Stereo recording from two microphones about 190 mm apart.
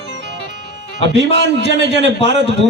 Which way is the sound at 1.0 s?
65° right (ahead or behind).